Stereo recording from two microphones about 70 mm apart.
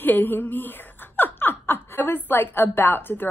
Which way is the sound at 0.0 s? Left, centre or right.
Left.